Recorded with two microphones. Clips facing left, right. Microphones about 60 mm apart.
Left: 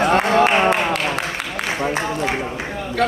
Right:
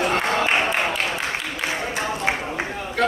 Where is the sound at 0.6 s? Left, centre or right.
Left.